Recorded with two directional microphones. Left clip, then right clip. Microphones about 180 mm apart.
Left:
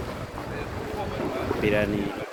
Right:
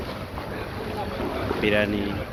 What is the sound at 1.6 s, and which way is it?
Speech, centre (ahead or behind).